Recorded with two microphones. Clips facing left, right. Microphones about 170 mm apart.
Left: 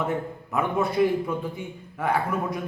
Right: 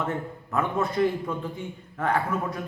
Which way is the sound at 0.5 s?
10° left (ahead or behind).